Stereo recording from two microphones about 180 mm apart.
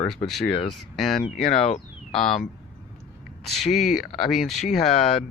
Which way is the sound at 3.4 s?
Centre (ahead or behind).